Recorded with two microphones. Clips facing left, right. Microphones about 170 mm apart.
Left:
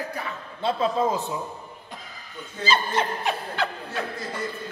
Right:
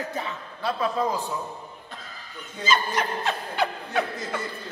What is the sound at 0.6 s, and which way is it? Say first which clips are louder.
Speech: left 2 dB; 25° left (ahead or behind).